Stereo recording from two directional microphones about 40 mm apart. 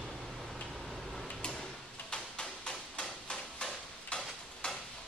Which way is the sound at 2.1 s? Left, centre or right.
Left.